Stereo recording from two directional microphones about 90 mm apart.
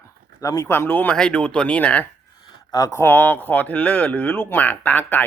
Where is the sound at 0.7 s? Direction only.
25° left (ahead or behind).